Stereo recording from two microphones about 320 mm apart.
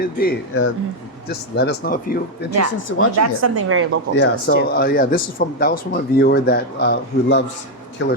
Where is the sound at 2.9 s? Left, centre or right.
Left.